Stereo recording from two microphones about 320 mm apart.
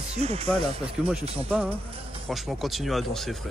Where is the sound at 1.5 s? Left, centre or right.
Centre.